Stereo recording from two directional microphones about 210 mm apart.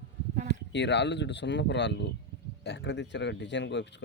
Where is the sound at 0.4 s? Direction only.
55° left (ahead or behind).